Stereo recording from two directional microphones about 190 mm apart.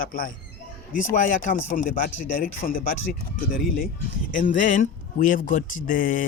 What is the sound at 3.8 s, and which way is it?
Speech, 45° left (ahead or behind).